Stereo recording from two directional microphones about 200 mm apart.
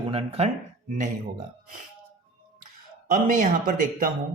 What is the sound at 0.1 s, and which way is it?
Speech, 30° right (ahead or behind).